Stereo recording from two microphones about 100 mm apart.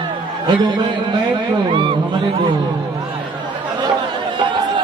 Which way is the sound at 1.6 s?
60° right (ahead or behind).